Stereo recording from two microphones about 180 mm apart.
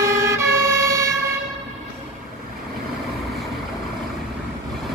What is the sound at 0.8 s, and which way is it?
Vehicle, 15° right (ahead or behind).